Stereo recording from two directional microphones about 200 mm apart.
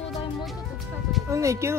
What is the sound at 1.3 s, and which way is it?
Speech, 15° right (ahead or behind).